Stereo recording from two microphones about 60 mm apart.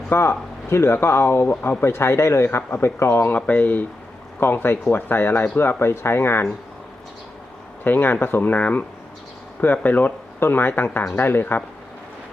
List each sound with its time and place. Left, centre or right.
0.1 s speech: left
3.3 s speech: left
4.4 s speech: left
7.9 s speech: left